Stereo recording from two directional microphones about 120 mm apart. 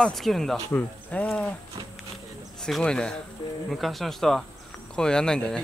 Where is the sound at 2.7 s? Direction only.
5° left (ahead or behind).